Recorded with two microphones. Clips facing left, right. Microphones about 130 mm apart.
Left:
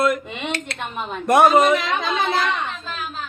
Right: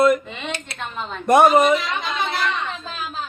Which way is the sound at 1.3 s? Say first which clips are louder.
Right 1 dB; centre (ahead or behind).